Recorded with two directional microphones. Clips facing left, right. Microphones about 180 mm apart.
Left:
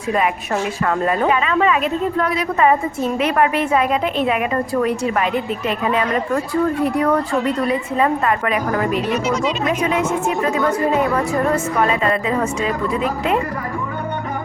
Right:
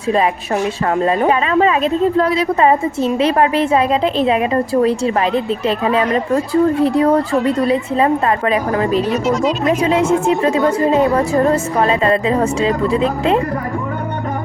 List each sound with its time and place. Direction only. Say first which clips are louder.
1.0 s a woman's voice: right 3 dB; 30° right (ahead or behind)
9.0 s speech: right 4 dB; centre (ahead or behind)
9.6 s a woman's voice: right 7 dB; 30° right (ahead or behind)